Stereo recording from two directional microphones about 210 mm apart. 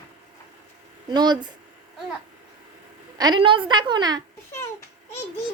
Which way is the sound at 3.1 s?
20° right (ahead or behind).